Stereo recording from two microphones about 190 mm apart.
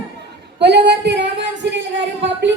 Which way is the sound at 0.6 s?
65° right (ahead or behind).